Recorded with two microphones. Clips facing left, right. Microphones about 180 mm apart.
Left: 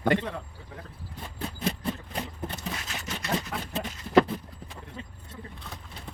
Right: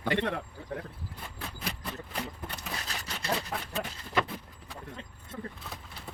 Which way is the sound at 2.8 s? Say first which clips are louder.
Left 1 dB; 35° right (ahead or behind).